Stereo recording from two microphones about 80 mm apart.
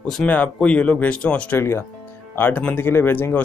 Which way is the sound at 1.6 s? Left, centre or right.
Left.